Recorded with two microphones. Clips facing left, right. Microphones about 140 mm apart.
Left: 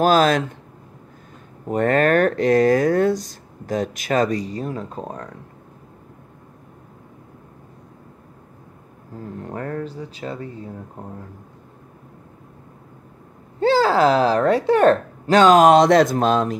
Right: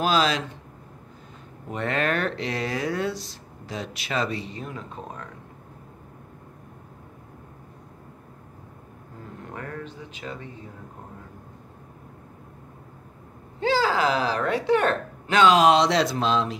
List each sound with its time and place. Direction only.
0.0 s speech: 50° left (ahead or behind)
1.7 s speech: 45° left (ahead or behind)
9.4 s a woman's voice: 35° left (ahead or behind)
13.6 s a woman's voice: 40° left (ahead or behind)